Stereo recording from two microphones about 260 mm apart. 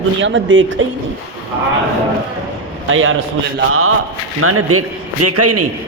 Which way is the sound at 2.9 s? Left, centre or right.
Right.